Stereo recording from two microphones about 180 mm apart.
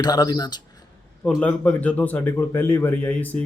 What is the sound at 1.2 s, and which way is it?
A man's voice, 5° left (ahead or behind).